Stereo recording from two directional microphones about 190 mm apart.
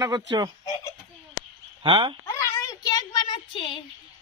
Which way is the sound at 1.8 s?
25° right (ahead or behind).